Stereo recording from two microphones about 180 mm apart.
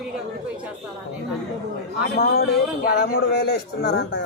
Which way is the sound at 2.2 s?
60° left (ahead or behind).